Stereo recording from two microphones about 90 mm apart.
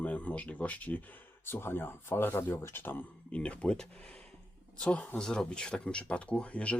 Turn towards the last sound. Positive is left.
turn(degrees=15)  # may be behind; listen again after turning